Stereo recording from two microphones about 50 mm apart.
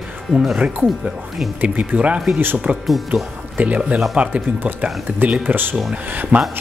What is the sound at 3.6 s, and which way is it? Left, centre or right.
Speech, right.